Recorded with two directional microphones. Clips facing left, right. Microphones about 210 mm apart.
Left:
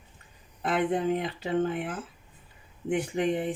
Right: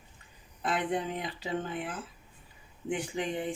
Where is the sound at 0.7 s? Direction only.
55° left (ahead or behind).